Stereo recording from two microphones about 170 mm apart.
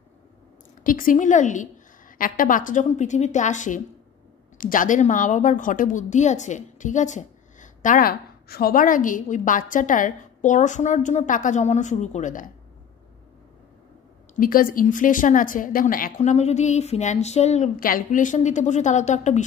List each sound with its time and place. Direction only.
0.8 s a woman's voice: 55° left (ahead or behind)
14.4 s a woman's voice: 55° left (ahead or behind)
16.2 s speech: 40° left (ahead or behind)
17.7 s a woman's voice: 55° left (ahead or behind)